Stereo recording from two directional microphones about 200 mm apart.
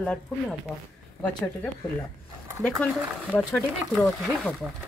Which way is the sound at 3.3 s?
5° left (ahead or behind).